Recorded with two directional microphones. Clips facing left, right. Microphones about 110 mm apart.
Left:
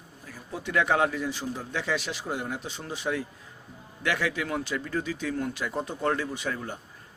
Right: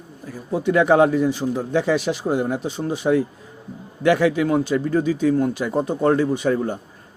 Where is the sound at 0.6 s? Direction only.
20° right (ahead or behind).